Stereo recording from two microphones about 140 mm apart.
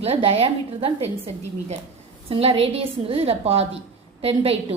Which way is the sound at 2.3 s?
45° right (ahead or behind).